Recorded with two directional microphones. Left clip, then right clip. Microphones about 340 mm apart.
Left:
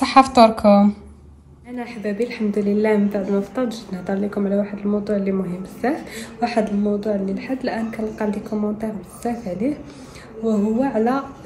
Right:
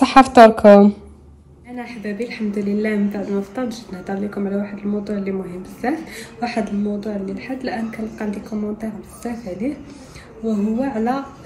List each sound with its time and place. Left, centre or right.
0.6 s a woman's voice: left
1.8 s a woman's voice: centre